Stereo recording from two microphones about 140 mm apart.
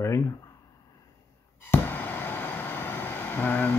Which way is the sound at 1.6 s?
15° left (ahead or behind).